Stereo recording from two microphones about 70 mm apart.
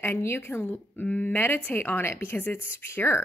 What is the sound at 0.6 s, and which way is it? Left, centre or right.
A woman's voice, left.